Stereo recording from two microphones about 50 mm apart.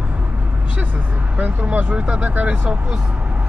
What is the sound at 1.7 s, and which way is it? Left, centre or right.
Speech, right.